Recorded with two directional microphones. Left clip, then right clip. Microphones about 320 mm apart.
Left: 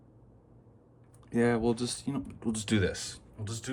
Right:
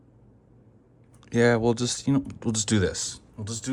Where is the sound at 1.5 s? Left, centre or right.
Right.